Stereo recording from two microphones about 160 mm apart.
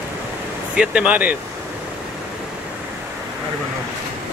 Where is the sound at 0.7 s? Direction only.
5° right (ahead or behind).